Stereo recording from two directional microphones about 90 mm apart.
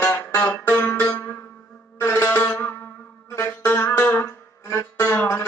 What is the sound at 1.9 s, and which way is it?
Music, 25° left (ahead or behind).